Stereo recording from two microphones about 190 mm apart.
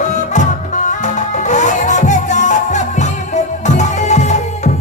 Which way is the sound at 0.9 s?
40° left (ahead or behind).